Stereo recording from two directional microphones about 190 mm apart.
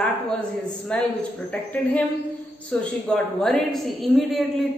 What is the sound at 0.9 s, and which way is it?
A man's voice, 5° left (ahead or behind).